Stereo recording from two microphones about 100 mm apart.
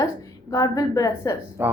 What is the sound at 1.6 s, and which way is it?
Speech, 20° right (ahead or behind).